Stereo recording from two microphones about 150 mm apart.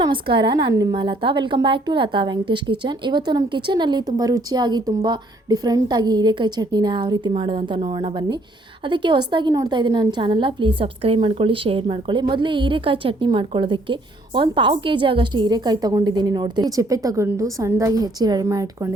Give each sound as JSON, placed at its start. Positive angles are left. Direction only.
{"t": 0.0, "sound": "a woman's voice", "side_deg": -35}